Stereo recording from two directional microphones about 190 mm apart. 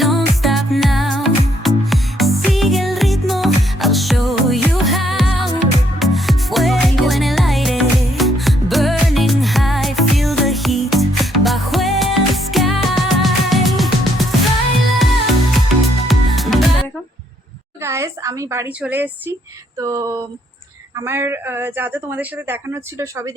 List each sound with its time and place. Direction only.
0.0 s music: centre (ahead or behind)
17.8 s a sound: 15° right (ahead or behind)
18.8 s speech: 10° right (ahead or behind)